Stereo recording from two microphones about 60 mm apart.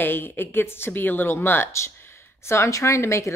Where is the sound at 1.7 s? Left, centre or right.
Left.